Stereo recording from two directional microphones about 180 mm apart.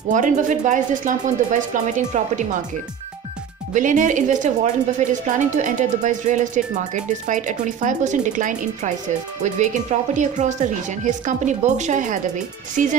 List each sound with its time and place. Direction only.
0.1 s a woman's voice: 45° right (ahead or behind)
3.7 s a woman's voice: 45° right (ahead or behind)